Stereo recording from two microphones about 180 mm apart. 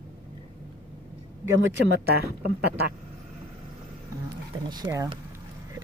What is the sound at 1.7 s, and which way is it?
Speech, 70° right (ahead or behind).